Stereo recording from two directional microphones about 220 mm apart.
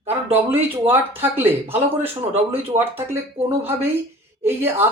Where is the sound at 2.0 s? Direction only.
25° right (ahead or behind).